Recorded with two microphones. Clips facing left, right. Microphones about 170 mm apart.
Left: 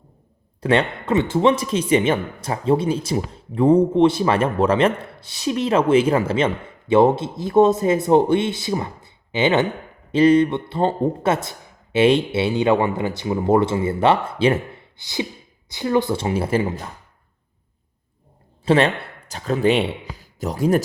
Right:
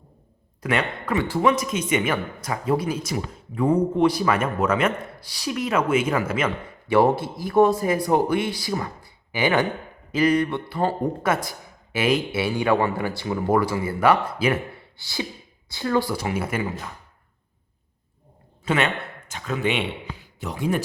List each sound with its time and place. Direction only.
0.6 s speech: 30° left (ahead or behind)
18.6 s a man's voice: 30° left (ahead or behind)